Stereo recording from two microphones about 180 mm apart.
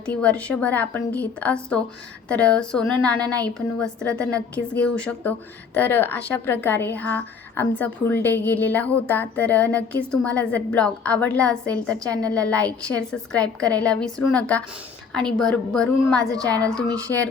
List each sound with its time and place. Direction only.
0.1 s a woman's voice: 5° left (ahead or behind)
16.3 s a woman's voice: 20° right (ahead or behind)
16.6 s a woman's voice: 5° left (ahead or behind)